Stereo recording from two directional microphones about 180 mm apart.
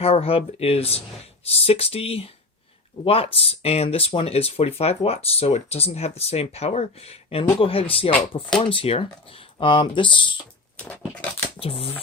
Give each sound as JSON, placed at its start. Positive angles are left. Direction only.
{"t": 0.0, "sound": "speech", "side_deg": 30}
{"t": 10.8, "sound": "speech", "side_deg": 10}
{"t": 11.6, "sound": "speech", "side_deg": 35}